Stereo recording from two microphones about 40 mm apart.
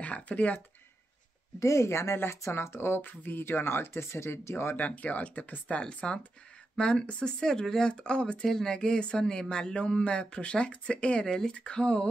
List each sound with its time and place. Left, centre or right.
0.0 s speech: left
2.1 s speech: left
4.7 s speech: left
5.8 s speech: left
7.3 s speech: centre
8.5 s speech: centre
8.7 s speech: left